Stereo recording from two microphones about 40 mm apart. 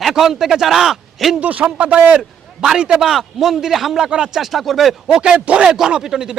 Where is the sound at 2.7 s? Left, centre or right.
Centre.